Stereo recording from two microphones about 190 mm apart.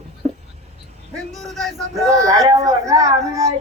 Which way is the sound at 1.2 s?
Centre (ahead or behind).